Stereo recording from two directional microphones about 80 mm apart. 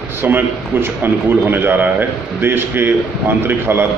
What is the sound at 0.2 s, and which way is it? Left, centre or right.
A man's voice, right.